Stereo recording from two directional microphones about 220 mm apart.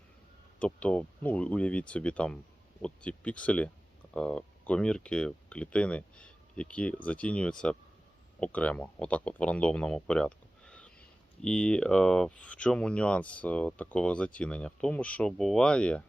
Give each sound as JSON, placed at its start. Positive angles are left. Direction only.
{"t": 0.6, "sound": "speech", "side_deg": 5}